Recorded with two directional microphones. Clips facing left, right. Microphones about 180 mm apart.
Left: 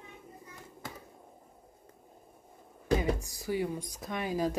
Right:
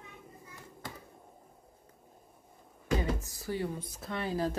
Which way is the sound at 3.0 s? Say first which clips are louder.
Left 2 dB; 15° left (ahead or behind).